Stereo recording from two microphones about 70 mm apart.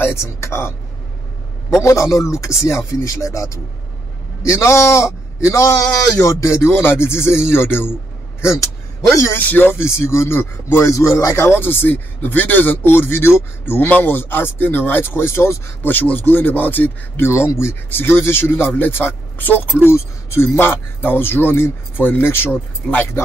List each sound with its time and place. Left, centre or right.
0.0 s a man's voice: left
1.8 s a man's voice: left
9.1 s speech: left
9.4 s a man's voice: left
15.8 s speech: left
17.3 s a man's voice: left
19.9 s a man's voice: left